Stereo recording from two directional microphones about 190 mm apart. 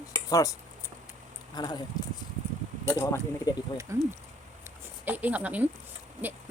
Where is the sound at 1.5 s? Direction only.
20° left (ahead or behind).